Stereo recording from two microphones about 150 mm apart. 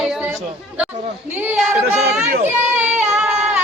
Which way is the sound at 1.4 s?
10° right (ahead or behind).